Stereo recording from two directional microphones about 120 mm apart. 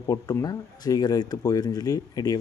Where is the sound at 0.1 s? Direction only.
30° left (ahead or behind).